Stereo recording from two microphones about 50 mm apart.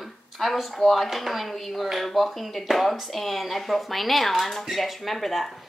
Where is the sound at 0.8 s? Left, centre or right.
Centre.